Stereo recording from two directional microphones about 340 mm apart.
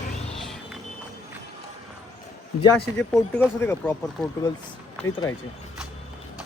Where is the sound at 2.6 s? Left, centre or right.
Centre.